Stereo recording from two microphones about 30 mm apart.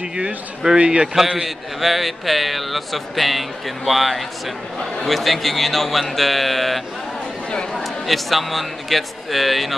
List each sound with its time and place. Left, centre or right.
0.0 s a man's voice: right
1.0 s a man's voice: centre